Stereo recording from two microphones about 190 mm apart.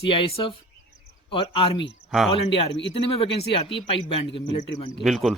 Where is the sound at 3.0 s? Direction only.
30° left (ahead or behind).